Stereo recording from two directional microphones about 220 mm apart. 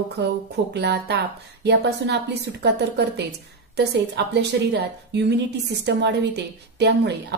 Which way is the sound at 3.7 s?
50° right (ahead or behind).